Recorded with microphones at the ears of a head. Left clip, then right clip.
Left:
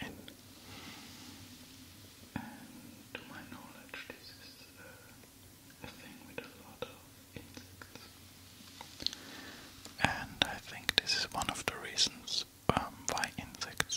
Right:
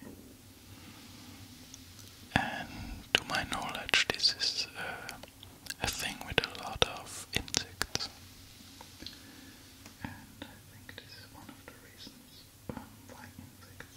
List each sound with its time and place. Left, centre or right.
2.3 s whispering: right
9.9 s whispering: left